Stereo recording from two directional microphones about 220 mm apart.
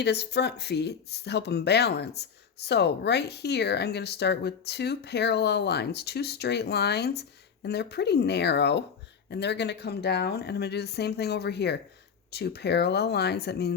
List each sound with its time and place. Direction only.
0.0 s speech: 50° left (ahead or behind)